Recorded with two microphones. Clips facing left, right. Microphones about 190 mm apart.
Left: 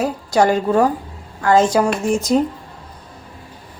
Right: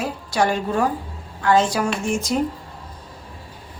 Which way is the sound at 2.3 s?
35° left (ahead or behind).